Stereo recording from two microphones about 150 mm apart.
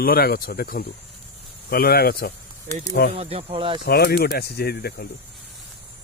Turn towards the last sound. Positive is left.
turn(degrees=90)